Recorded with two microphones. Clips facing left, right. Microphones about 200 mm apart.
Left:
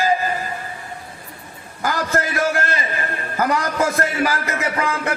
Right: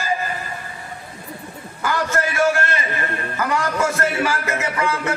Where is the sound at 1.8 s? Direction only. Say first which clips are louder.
Even; 40° left (ahead or behind).